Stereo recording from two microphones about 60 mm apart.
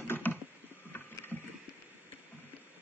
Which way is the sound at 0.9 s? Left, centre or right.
Left.